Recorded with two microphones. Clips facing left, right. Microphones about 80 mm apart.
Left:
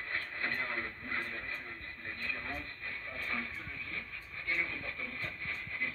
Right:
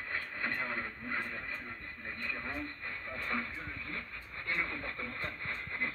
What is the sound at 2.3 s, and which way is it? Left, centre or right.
Television, centre.